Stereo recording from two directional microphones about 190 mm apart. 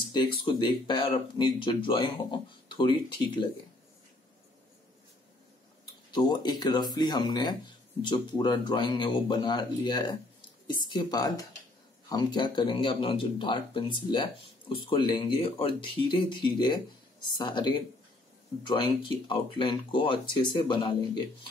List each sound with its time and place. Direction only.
0.1 s speech: 25° left (ahead or behind)
6.1 s speech: 20° left (ahead or behind)